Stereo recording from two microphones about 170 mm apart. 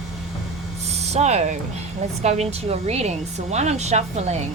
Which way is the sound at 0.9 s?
40° right (ahead or behind).